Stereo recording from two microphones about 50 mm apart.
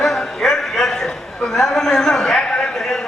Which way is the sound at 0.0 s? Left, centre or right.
Centre.